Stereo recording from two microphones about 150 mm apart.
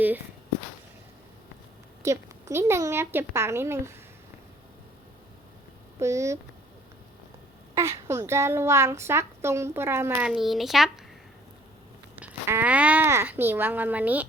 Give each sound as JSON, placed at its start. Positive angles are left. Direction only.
{"t": 2.0, "sound": "a woman's voice", "side_deg": -20}
{"t": 6.0, "sound": "speech", "side_deg": -20}
{"t": 7.8, "sound": "a woman's voice", "side_deg": -20}
{"t": 12.1, "sound": "a woman's voice", "side_deg": -10}